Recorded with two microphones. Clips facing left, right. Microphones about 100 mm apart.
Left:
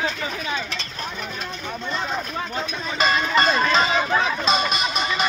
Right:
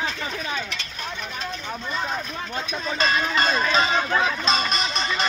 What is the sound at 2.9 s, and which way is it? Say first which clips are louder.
A man's voice: left 3 dB; centre (ahead or behind).